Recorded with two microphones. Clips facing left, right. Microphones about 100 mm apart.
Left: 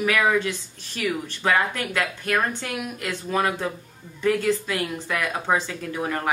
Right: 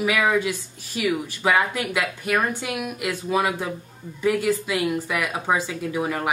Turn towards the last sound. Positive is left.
turn(degrees=-10)  # may be behind; listen again after turning